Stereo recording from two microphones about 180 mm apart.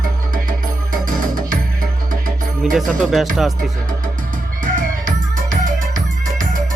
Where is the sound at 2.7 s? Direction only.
Centre (ahead or behind).